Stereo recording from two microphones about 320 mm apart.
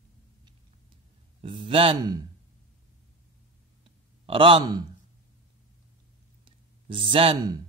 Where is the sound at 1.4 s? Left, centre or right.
Centre.